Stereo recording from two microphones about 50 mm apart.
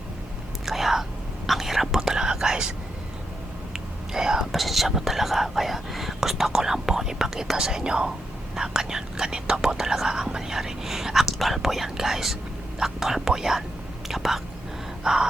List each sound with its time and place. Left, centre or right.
0.6 s whispering: centre
3.7 s speech: centre